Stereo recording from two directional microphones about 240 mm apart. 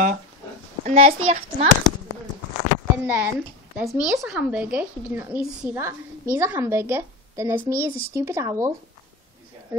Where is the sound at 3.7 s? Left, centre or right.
Centre.